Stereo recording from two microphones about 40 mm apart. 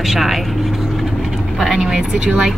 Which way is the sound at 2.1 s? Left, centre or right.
Right.